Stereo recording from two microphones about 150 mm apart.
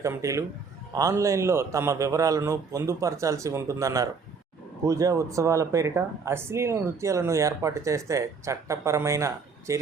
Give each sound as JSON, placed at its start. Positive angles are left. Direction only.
{"t": 0.0, "sound": "speech", "side_deg": -20}